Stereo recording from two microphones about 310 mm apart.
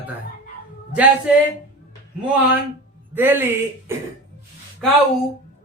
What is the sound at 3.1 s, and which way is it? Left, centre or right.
Speech, centre.